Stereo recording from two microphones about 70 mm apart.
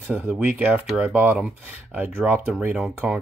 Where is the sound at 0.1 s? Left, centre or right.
Right.